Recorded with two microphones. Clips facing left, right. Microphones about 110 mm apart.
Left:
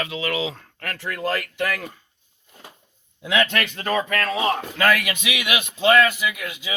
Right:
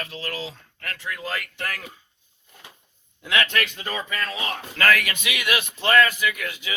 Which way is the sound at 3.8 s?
50° left (ahead or behind).